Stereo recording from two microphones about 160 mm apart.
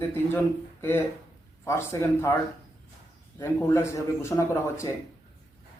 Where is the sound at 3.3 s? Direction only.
20° left (ahead or behind).